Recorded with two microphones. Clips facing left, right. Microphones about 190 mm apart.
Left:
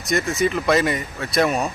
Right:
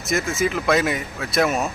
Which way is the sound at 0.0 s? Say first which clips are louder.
Left 1 dB; centre (ahead or behind).